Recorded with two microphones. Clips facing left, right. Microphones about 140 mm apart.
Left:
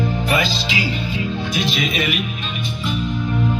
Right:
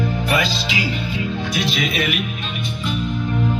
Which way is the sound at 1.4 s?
15° left (ahead or behind).